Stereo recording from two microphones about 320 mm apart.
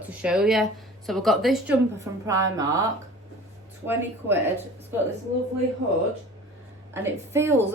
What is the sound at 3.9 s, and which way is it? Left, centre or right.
Speech, centre.